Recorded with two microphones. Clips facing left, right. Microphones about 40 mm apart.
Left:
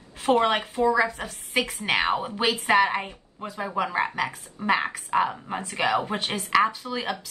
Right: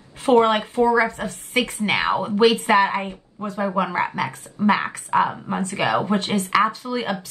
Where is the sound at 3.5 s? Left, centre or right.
Right.